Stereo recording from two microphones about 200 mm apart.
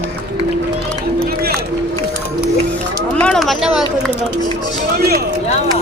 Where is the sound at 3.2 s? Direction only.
5° left (ahead or behind).